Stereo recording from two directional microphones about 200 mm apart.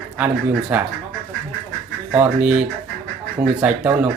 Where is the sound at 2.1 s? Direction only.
10° right (ahead or behind).